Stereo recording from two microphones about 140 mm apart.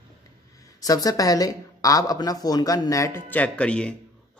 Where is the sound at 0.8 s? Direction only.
25° left (ahead or behind).